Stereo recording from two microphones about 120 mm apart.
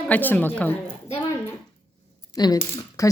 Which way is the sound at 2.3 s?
35° left (ahead or behind).